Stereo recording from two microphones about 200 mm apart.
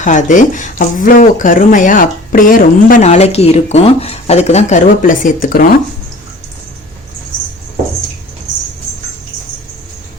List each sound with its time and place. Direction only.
0.0 s speech: 40° left (ahead or behind)